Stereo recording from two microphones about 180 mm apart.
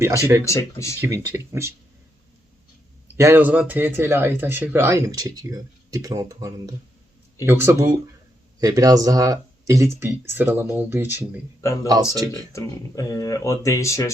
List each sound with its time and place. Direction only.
0.4 s speech: 15° left (ahead or behind)
1.0 s speech: 15° right (ahead or behind)
3.2 s speech: 15° right (ahead or behind)
11.6 s speech: 15° left (ahead or behind)